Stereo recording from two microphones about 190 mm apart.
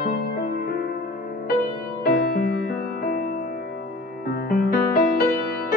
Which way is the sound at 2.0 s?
50° left (ahead or behind).